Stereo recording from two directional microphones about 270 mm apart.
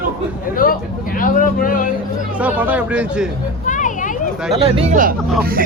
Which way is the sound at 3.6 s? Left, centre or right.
Left.